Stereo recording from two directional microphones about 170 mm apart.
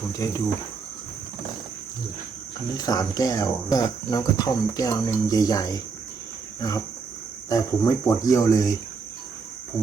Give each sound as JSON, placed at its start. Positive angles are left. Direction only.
{"t": 0.1, "sound": "speech", "side_deg": 20}
{"t": 2.7, "sound": "speech", "side_deg": 20}